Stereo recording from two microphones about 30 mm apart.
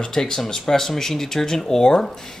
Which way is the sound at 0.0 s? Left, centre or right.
Centre.